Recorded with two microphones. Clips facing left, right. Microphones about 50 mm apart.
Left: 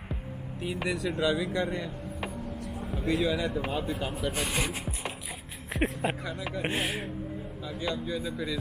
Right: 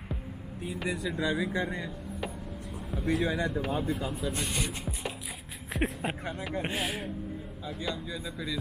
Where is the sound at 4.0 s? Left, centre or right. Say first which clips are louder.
Left 1 dB; left.